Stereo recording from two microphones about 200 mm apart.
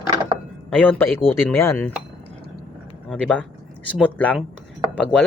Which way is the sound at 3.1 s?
Centre (ahead or behind).